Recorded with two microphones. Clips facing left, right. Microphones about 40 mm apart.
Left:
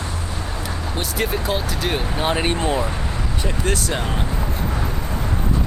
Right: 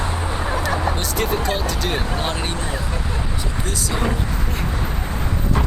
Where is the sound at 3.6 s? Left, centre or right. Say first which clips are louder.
Left 5 dB; left.